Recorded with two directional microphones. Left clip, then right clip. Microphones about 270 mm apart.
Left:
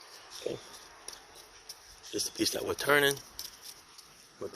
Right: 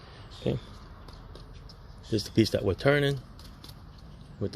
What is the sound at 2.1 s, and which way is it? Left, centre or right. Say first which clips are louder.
Speech: right 6 dB; centre.